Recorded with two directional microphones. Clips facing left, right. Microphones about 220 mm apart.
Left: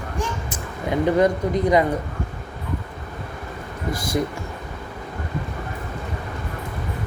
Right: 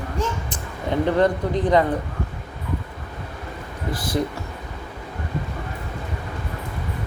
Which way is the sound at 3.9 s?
45° left (ahead or behind).